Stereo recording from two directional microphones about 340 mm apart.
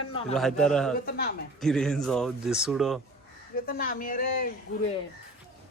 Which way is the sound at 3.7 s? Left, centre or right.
Left.